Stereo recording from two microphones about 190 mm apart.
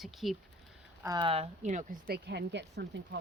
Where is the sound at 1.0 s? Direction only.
25° right (ahead or behind).